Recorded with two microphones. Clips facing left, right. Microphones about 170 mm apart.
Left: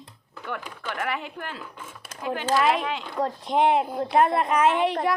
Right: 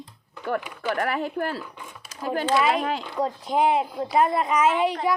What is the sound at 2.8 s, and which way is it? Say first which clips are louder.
Speech: right 3 dB; 40° right (ahead or behind).